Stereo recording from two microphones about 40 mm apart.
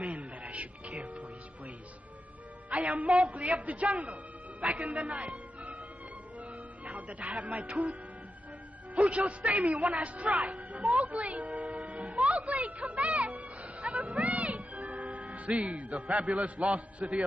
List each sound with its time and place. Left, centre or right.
0.0 s music: right
2.7 s a man's voice: right
5.1 s music: right
8.9 s a man's voice: right
10.4 s music: right
15.5 s a man's voice: right